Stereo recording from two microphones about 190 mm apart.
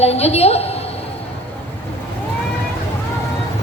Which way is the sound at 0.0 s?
35° left (ahead or behind).